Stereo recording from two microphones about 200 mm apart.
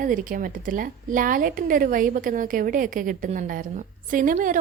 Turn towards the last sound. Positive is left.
turn(degrees=-40)  # may be behind; listen again after turning